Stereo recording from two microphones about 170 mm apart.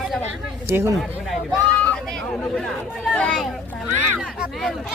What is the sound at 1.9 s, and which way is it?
Speech, 5° left (ahead or behind).